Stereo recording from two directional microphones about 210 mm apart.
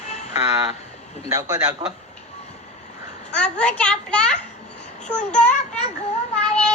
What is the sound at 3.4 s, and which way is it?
A child's voice, 5° left (ahead or behind).